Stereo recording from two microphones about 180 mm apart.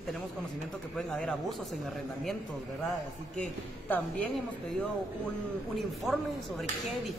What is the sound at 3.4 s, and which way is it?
Speech, 10° left (ahead or behind).